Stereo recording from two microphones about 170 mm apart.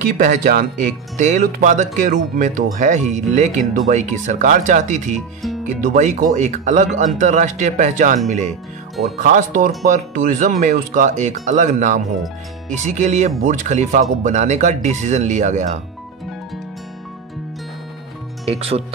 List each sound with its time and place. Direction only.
0.0 s speech: 50° right (ahead or behind)
18.5 s speech: 35° right (ahead or behind)